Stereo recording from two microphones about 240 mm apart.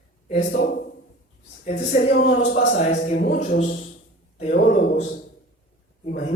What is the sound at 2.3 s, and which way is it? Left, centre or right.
A man's voice, left.